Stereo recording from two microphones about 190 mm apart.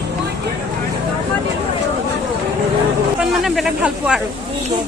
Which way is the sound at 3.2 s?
Centre (ahead or behind).